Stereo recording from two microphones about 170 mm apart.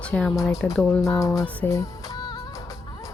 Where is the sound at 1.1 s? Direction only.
20° left (ahead or behind).